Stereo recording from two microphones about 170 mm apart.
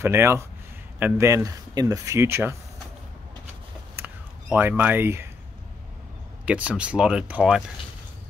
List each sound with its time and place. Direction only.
0.0 s speech: 15° right (ahead or behind)
3.9 s a sound: 10° right (ahead or behind)
6.4 s speech: 5° right (ahead or behind)